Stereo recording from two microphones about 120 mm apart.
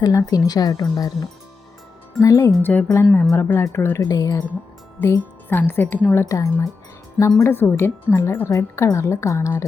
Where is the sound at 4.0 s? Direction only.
30° left (ahead or behind).